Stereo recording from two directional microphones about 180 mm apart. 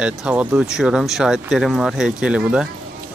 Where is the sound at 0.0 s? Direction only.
5° right (ahead or behind).